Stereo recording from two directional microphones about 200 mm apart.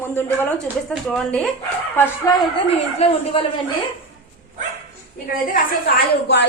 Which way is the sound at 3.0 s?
30° left (ahead or behind).